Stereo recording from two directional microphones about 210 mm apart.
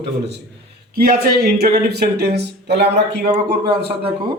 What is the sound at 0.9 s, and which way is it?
Speech, 45° right (ahead or behind).